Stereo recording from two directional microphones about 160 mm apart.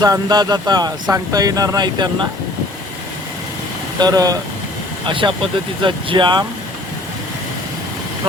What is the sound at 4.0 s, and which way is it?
Speech, 25° right (ahead or behind).